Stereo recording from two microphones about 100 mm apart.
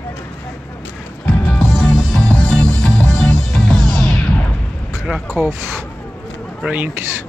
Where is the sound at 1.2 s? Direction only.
15° left (ahead or behind).